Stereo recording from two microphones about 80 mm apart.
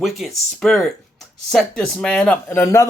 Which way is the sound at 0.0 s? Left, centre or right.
Centre.